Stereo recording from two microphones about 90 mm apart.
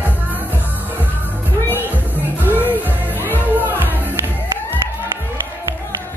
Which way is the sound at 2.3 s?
20° right (ahead or behind).